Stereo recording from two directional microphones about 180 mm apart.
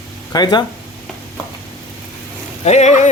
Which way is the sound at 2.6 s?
40° left (ahead or behind).